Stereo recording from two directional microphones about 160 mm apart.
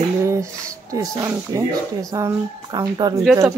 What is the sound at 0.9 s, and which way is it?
Speech, 20° right (ahead or behind).